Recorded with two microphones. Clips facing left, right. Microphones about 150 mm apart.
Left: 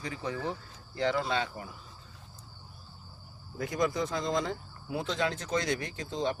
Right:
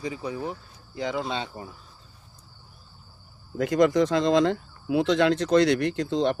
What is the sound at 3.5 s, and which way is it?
Speech, 90° right.